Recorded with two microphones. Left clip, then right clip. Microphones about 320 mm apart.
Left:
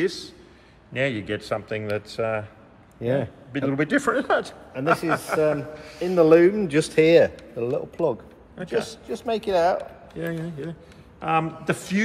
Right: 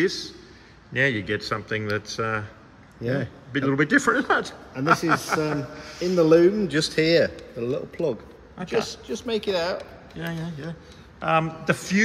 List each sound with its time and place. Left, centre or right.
0.0 s a man's voice: centre
3.0 s a man's voice: left
3.5 s a man's voice: centre
6.1 s speech: centre
8.6 s speech: centre
10.1 s a man's voice: centre